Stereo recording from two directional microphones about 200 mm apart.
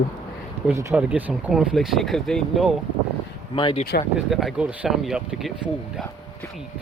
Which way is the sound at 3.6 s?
25° left (ahead or behind).